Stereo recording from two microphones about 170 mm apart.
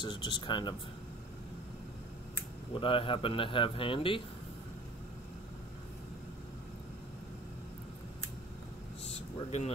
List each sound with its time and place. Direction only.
0.0 s speech: 25° left (ahead or behind)
2.7 s a man's voice: 30° left (ahead or behind)
9.0 s air conditioning: 40° left (ahead or behind)